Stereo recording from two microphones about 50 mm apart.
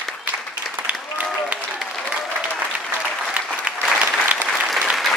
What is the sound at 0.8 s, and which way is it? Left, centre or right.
Applause, right.